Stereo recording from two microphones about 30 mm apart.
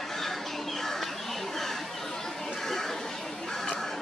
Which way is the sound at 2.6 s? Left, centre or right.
Centre.